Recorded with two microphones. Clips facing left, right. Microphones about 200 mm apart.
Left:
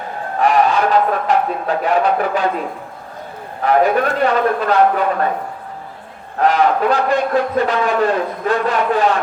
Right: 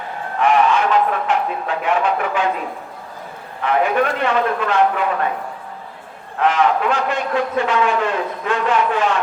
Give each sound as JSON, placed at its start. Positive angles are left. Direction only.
{"t": 0.3, "sound": "speech", "side_deg": 40}
{"t": 3.6, "sound": "a man's voice", "side_deg": 40}
{"t": 6.4, "sound": "a man's voice", "side_deg": 35}